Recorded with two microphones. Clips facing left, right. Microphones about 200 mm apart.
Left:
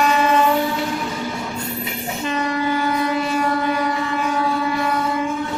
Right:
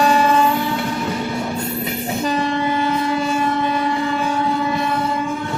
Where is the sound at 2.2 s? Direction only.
30° right (ahead or behind).